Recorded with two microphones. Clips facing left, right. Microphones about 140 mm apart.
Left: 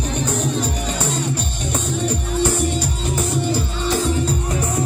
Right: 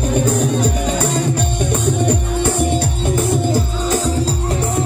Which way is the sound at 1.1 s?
55° right (ahead or behind).